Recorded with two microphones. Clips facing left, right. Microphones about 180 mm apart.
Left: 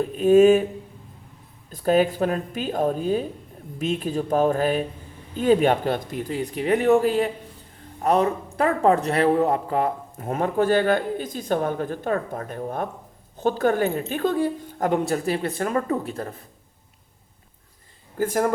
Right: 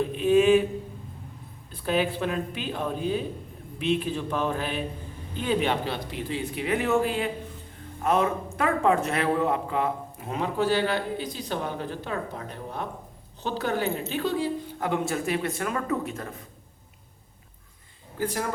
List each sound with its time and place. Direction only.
0.1 s speech: 45° left (ahead or behind)
1.7 s a woman's voice: 45° left (ahead or behind)
18.2 s speech: 45° left (ahead or behind)